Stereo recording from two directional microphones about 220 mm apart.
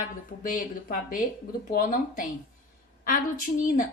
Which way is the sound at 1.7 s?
35° left (ahead or behind).